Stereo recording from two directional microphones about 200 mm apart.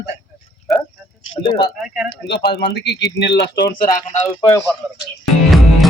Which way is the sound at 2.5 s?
55° left (ahead or behind).